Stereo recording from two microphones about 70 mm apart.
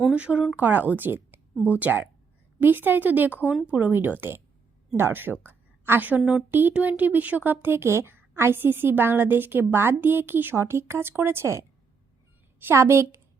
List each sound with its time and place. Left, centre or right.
0.1 s a woman's voice: centre; by 11.6 s right
12.7 s a woman's voice: right